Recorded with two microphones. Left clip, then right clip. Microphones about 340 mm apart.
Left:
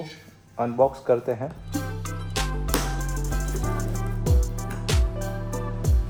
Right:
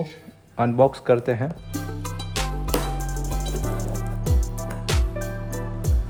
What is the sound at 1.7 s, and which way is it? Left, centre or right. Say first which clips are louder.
Music: even; centre.